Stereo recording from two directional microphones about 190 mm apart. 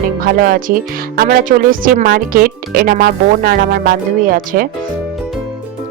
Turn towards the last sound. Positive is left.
turn(degrees=-50)  # may be behind; listen again after turning